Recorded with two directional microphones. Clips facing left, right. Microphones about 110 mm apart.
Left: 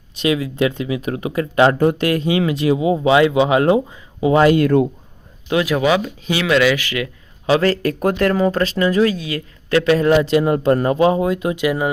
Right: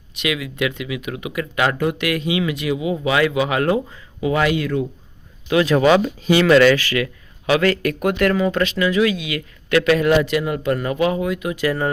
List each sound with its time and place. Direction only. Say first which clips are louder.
0.2 s speech: left 5 dB; 35° left (ahead or behind)
4.5 s speech: left 7 dB; 55° left (ahead or behind)
5.6 s speech: right 4 dB; 10° left (ahead or behind)
6.7 s speech: right 2 dB; 20° left (ahead or behind)
11.5 s speech: left 2 dB; 15° left (ahead or behind)